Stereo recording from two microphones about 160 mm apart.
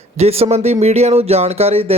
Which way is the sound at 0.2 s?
40° right (ahead or behind).